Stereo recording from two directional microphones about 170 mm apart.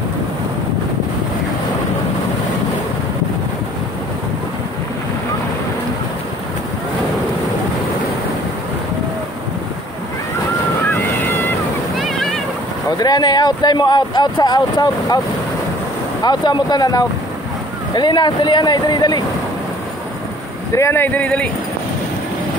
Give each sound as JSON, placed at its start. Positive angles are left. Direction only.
{"t": 10.9, "sound": "waves", "side_deg": 10}
{"t": 12.0, "sound": "a sound", "side_deg": 0}
{"t": 13.0, "sound": "speech", "side_deg": 25}
{"t": 16.3, "sound": "speech", "side_deg": 25}
{"t": 20.7, "sound": "speech", "side_deg": 15}